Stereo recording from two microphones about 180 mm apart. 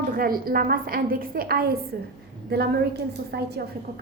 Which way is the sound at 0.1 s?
55° right (ahead or behind).